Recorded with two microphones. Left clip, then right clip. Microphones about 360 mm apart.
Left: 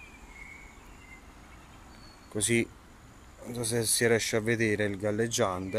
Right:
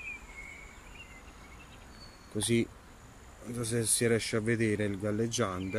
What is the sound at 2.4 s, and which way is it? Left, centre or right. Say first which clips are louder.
Speech: left 2 dB; centre.